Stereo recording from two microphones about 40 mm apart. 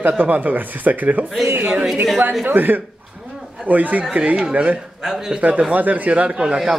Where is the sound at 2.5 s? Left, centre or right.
Right.